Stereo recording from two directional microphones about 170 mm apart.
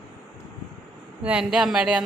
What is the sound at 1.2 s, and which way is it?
Speech, 5° right (ahead or behind).